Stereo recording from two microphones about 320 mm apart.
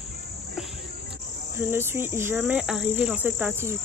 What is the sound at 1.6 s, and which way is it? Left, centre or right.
Cricket, centre.